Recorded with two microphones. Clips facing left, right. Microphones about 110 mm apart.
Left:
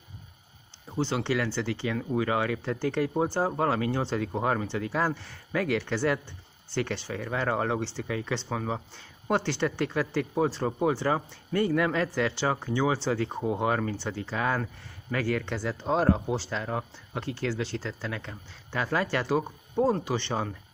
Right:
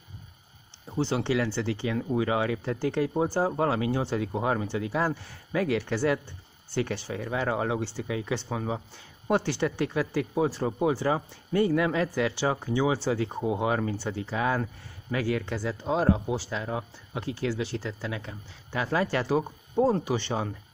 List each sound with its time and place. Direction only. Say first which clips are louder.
1.1 s speech: right 2 dB; 20° right (ahead or behind)
3.2 s speech: right 1 dB; 20° left (ahead or behind)
3.5 s speech: right 1 dB; 20° right (ahead or behind)
15.4 s speech: even; 5° right (ahead or behind)